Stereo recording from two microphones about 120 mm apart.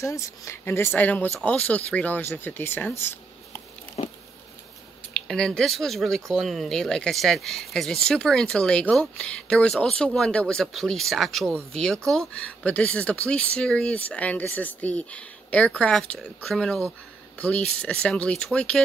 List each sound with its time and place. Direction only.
0.0 s speech: 25° left (ahead or behind)
4.0 s insect: 65° left (ahead or behind)
5.1 s speech: 5° left (ahead or behind)
17.8 s speech: 10° left (ahead or behind)